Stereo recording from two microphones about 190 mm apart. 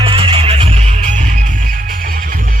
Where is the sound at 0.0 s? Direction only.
30° right (ahead or behind).